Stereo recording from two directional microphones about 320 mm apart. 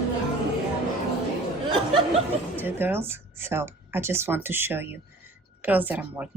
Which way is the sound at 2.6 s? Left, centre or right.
Centre.